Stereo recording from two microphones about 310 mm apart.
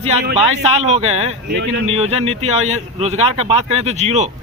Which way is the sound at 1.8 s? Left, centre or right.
Centre.